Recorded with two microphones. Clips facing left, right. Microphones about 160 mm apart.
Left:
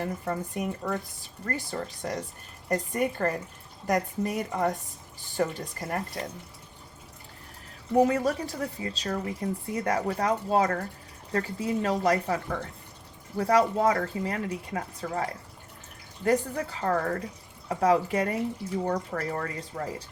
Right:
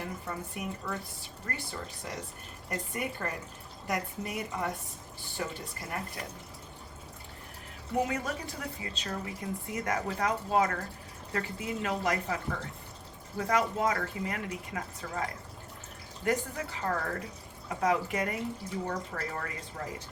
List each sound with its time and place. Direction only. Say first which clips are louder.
0.0 s speech: left 7 dB; 40° left (ahead or behind)
7.9 s speech: left 8 dB; 35° left (ahead or behind)